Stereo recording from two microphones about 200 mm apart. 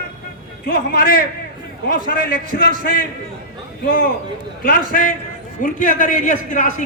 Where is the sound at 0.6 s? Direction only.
50° left (ahead or behind).